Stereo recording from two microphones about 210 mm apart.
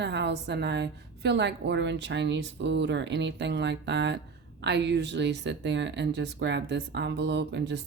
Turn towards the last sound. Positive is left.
turn(degrees=-55)  # may be behind; listen again after turning